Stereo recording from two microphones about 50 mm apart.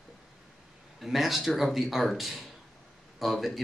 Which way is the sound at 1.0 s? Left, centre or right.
Centre.